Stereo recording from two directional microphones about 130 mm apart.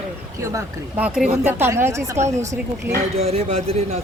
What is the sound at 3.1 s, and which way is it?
Speech, 50° right (ahead or behind).